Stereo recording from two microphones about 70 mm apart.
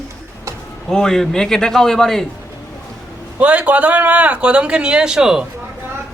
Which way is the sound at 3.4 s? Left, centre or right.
Centre.